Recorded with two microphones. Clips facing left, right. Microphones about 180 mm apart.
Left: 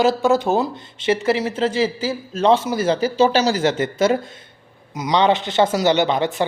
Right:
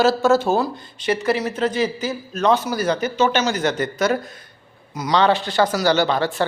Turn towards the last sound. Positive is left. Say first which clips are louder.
# left 1 dB
turn(degrees=20)  # may be behind; listen again after turning